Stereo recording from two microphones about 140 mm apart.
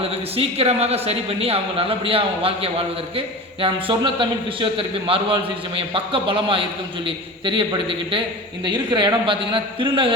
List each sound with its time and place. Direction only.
0.0 s a man's voice: 45° right (ahead or behind)